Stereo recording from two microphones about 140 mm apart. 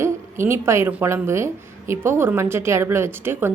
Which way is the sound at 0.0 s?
20° right (ahead or behind).